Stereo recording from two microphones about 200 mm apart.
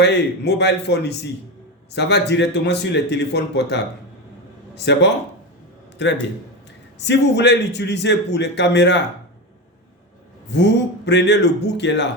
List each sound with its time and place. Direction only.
0.0 s a man's voice: 55° left (ahead or behind)
10.5 s a man's voice: 60° left (ahead or behind)